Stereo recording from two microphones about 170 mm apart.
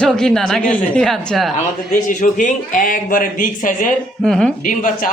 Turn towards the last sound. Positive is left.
turn(degrees=5)  # may be behind; listen again after turning